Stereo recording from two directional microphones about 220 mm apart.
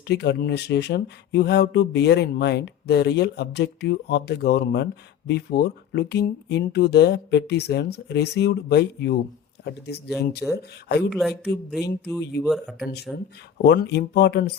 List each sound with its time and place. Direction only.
0.1 s speech: 50° left (ahead or behind)
11.1 s speech: centre (ahead or behind)
12.5 s speech: centre (ahead or behind)
13.1 s speech: 50° left (ahead or behind)